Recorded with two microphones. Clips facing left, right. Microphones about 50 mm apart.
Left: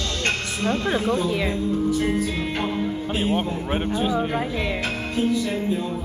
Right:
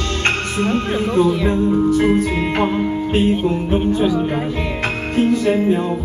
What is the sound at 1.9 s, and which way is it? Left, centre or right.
Speech, right.